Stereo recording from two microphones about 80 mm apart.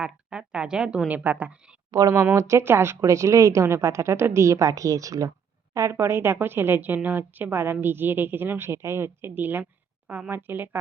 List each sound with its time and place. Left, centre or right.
0.0 s a woman's voice: centre
1.9 s speech: right
2.3 s a woman's voice: right